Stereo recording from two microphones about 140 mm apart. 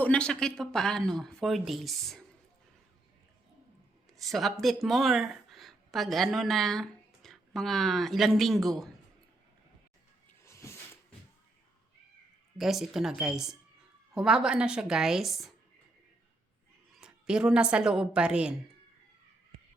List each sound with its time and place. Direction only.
0.0 s speech: 10° left (ahead or behind)
4.2 s a woman's voice: centre (ahead or behind)
10.4 s cat: 20° left (ahead or behind)
12.5 s speech: centre (ahead or behind)
16.9 s a woman's voice: 5° right (ahead or behind)